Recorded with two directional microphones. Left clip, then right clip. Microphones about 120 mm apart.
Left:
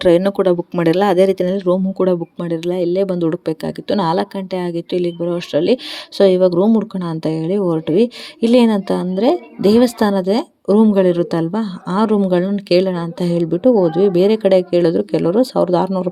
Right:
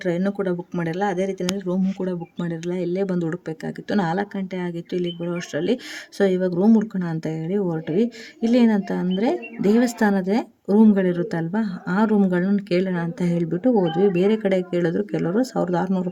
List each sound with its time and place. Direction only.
0.0 s speech: 55° left (ahead or behind)
2.4 s speech: 30° left (ahead or behind)